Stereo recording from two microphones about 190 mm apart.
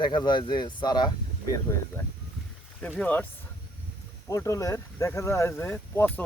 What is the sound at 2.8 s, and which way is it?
Speech, 5° left (ahead or behind).